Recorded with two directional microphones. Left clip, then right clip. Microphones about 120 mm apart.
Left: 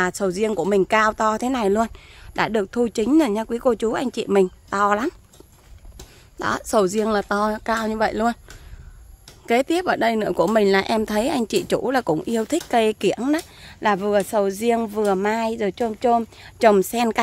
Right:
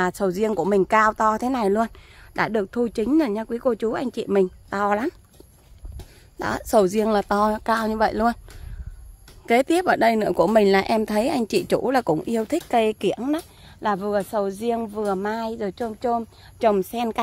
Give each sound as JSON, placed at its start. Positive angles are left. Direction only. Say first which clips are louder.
{"t": 0.0, "sound": "speech", "louder": "left 1 dB", "side_deg": -15}
{"t": 6.3, "sound": "speech", "louder": "even", "side_deg": -15}
{"t": 9.5, "sound": "speech", "louder": "right 1 dB", "side_deg": -20}
{"t": 12.2, "sound": "speech", "louder": "left 1 dB", "side_deg": -5}
{"t": 13.4, "sound": "speech", "louder": "left 4 dB", "side_deg": 15}